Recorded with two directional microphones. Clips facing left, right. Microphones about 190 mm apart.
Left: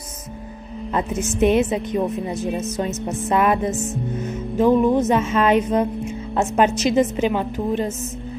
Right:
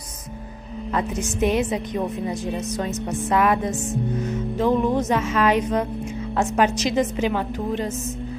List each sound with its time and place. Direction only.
0.9 s music: 25° left (ahead or behind)